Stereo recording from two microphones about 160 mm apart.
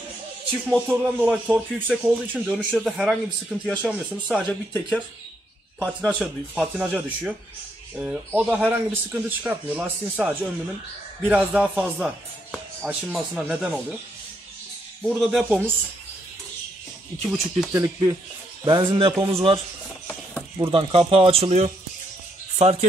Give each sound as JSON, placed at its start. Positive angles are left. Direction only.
{"t": 0.7, "sound": "speech", "side_deg": -10}
{"t": 5.9, "sound": "speech", "side_deg": -5}
{"t": 15.0, "sound": "speech", "side_deg": 0}
{"t": 17.3, "sound": "speech", "side_deg": -15}
{"t": 19.1, "sound": "speech", "side_deg": -15}
{"t": 20.5, "sound": "a man's voice", "side_deg": -35}